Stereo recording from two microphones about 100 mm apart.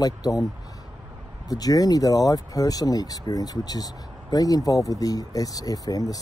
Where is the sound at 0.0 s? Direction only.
35° left (ahead or behind).